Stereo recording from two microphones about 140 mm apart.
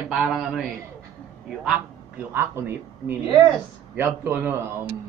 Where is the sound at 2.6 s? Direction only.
20° right (ahead or behind).